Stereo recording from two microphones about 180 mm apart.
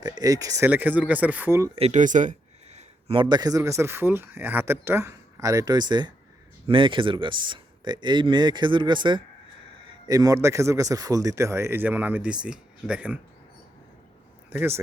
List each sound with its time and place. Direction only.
0.0 s speech: 20° right (ahead or behind)
1.7 s speech: 35° right (ahead or behind)
2.7 s speech: 30° right (ahead or behind); by 13.1 s 5° right (ahead or behind)
14.5 s speech: 10° right (ahead or behind)